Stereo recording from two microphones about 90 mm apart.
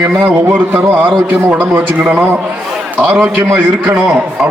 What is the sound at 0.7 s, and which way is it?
A man's voice, 25° right (ahead or behind).